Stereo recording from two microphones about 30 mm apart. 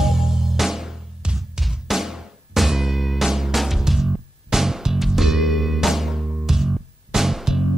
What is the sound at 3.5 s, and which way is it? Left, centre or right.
Music, centre.